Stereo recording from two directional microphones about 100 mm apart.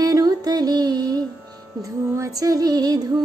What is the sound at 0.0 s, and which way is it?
Music, 40° right (ahead or behind).